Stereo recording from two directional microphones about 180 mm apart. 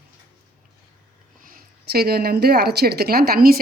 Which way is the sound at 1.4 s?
50° right (ahead or behind).